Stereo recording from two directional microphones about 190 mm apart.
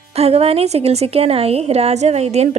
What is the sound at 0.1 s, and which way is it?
A woman's voice, 30° right (ahead or behind).